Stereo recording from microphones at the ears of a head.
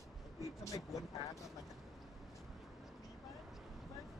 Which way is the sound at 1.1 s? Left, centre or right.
Left.